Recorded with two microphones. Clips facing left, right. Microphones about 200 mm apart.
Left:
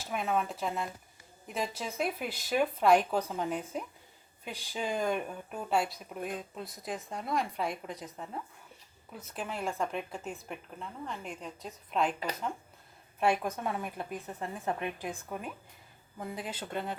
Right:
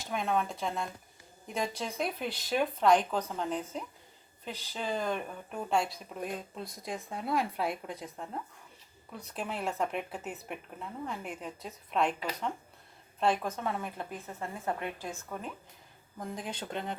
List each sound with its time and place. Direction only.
0.0 s speech: 5° left (ahead or behind)
13.1 s speech: 10° left (ahead or behind)